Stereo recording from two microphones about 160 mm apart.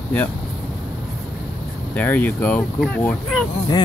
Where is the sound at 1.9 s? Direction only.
10° left (ahead or behind).